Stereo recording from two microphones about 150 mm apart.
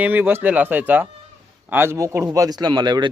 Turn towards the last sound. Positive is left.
turn(degrees=-30)  # may be behind; listen again after turning